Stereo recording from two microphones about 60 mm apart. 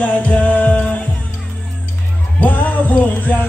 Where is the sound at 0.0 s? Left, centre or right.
Left.